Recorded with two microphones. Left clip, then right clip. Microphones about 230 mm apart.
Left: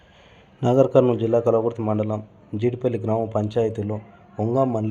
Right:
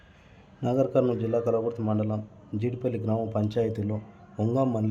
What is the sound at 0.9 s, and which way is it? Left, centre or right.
A man's voice, centre.